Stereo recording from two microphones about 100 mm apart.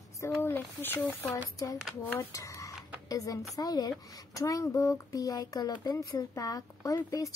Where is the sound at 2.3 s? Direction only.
35° left (ahead or behind).